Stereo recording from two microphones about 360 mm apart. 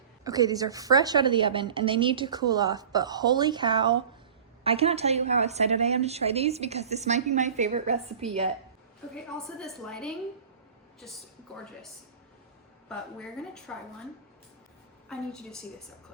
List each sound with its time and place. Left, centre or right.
0.3 s a woman's voice: centre
9.6 s a woman's voice: centre
12.9 s a woman's voice: centre
15.1 s a woman's voice: centre